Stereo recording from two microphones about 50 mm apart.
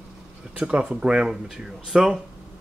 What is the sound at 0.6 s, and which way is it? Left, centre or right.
Speech, right.